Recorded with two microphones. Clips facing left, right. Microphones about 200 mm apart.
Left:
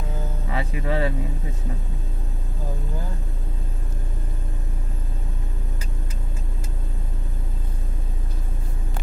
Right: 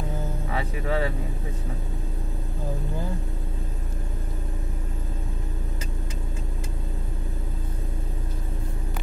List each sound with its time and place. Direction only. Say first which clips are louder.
0.6 s speech: left 2 dB; 15° left (ahead or behind)